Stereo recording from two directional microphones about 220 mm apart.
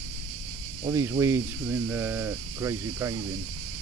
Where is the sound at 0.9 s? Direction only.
10° right (ahead or behind).